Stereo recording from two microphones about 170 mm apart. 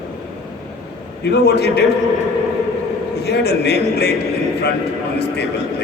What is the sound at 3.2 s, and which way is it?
Speech, 75° left (ahead or behind).